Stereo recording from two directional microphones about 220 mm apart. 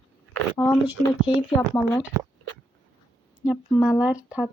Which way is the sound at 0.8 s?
5° right (ahead or behind).